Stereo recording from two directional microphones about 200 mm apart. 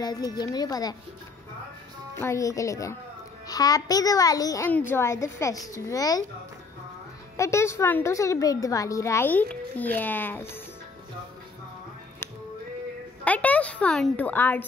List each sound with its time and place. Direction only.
0.0 s a woman's voice: 20° left (ahead or behind)
2.1 s a woman's voice: 15° left (ahead or behind)
7.3 s a woman's voice: 15° left (ahead or behind)
13.2 s a woman's voice: 5° left (ahead or behind)